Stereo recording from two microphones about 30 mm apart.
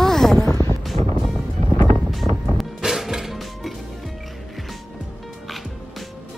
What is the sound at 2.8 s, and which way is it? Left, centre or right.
Music, centre.